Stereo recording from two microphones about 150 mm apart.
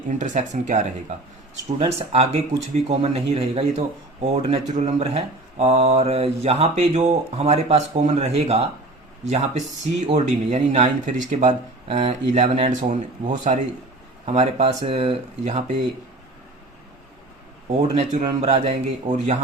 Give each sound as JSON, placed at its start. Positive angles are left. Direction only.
{"t": 0.1, "sound": "speech", "side_deg": -55}
{"t": 1.8, "sound": "speech", "side_deg": -40}
{"t": 10.1, "sound": "speech", "side_deg": -45}
{"t": 14.3, "sound": "speech", "side_deg": -40}
{"t": 17.7, "sound": "speech", "side_deg": -50}
{"t": 19.1, "sound": "speech", "side_deg": -55}